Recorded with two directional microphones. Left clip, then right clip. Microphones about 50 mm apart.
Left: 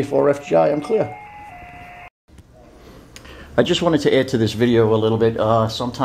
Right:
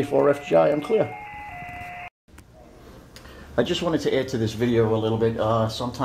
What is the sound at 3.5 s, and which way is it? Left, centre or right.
Speech, left.